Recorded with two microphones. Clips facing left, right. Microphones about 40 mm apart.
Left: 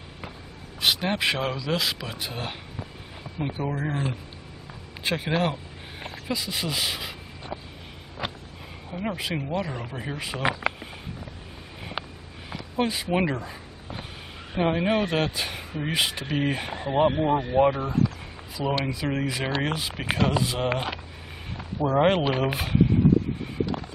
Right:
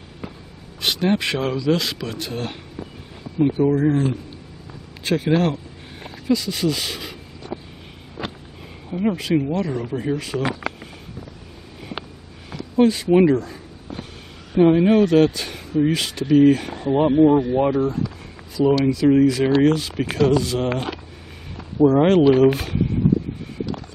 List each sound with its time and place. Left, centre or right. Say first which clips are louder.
0.7 s speech: right 4 dB; centre
7.4 s vehicle: right 4 dB; left
8.2 s vehicle: right 2 dB; centre
8.9 s speech: right 9 dB; centre
12.4 s a sound: right 9 dB; centre
14.6 s speech: right 9 dB; centre
23.6 s a sound: even; centre